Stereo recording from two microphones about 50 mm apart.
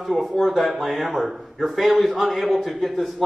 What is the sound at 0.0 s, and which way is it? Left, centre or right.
A man's voice, centre.